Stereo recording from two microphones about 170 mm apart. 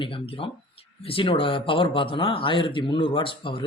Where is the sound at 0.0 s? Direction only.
30° left (ahead or behind).